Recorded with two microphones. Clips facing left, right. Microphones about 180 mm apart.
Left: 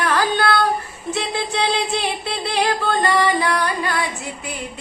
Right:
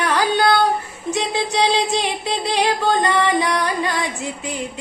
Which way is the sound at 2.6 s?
20° right (ahead or behind).